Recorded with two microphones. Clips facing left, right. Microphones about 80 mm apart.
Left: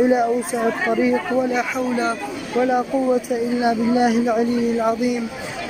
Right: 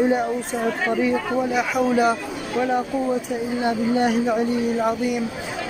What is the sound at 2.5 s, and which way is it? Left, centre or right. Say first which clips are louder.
Speech: left 3 dB; centre.